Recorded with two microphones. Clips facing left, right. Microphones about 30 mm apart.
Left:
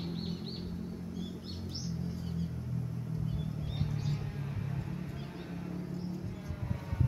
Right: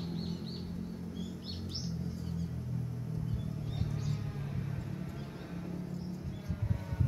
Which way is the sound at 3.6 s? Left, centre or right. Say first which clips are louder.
Left 2 dB; left.